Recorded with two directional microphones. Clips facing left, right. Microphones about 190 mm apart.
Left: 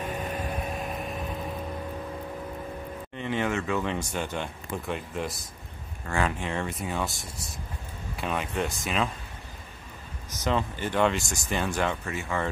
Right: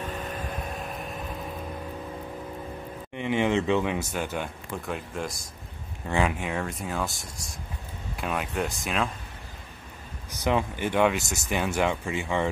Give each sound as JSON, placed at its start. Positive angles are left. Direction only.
{"t": 0.0, "sound": "vehicle", "side_deg": 10}
{"t": 3.2, "sound": "speech", "side_deg": -15}
{"t": 3.8, "sound": "speech", "side_deg": -10}
{"t": 6.0, "sound": "speech", "side_deg": -15}
{"t": 10.3, "sound": "speech", "side_deg": -15}